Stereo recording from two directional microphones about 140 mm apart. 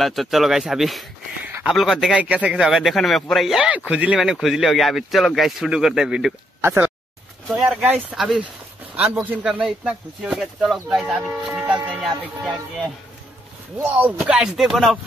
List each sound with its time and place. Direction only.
0.0 s a man's voice: centre (ahead or behind)
1.4 s a sound: 10° right (ahead or behind)
1.7 s a man's voice: centre (ahead or behind)
6.6 s speech: 15° right (ahead or behind)
7.4 s a man's voice: centre (ahead or behind)
12.2 s a man's voice: 5° left (ahead or behind)
13.9 s a man's voice: 10° right (ahead or behind)